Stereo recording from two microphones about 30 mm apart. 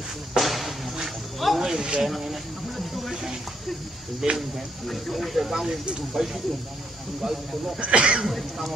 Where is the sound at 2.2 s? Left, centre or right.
Centre.